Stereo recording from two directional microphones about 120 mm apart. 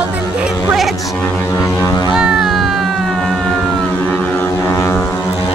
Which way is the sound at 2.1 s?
5° right (ahead or behind).